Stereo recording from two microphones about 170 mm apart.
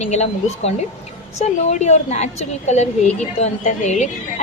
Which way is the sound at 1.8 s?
40° left (ahead or behind).